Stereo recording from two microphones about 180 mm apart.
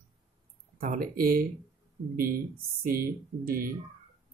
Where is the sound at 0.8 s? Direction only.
50° right (ahead or behind).